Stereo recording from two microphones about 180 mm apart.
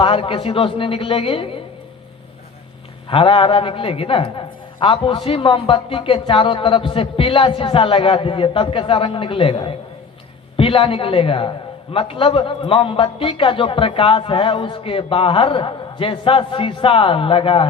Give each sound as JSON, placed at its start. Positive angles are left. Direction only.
{"t": 0.0, "sound": "a woman's voice", "side_deg": 30}
{"t": 3.1, "sound": "a woman's voice", "side_deg": 30}